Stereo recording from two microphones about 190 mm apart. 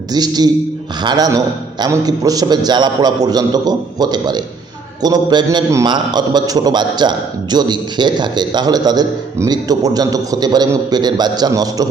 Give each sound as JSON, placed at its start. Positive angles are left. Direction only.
{"t": 0.1, "sound": "a man's voice", "side_deg": -20}